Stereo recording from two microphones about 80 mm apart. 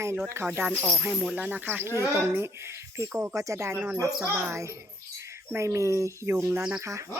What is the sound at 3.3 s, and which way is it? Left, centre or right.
Speech, right.